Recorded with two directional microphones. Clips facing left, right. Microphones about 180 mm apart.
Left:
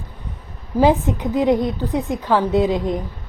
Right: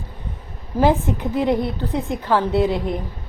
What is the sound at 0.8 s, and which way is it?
Speech, 15° left (ahead or behind).